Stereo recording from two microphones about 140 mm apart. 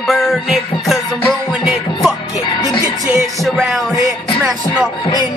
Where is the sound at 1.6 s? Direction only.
5° right (ahead or behind).